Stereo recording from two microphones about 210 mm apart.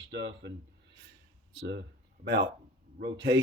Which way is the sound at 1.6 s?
60° right (ahead or behind).